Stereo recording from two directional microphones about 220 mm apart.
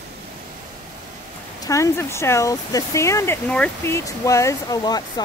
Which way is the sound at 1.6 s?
15° left (ahead or behind).